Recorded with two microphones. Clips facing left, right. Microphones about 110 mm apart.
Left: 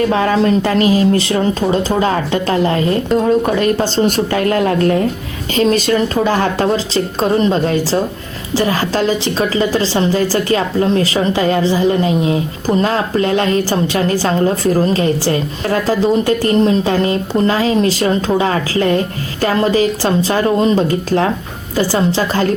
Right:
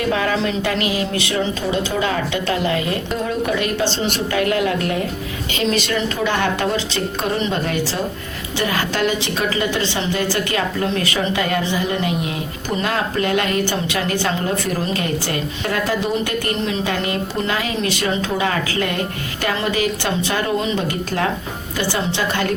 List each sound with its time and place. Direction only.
0.1 s a woman's voice: 35° left (ahead or behind)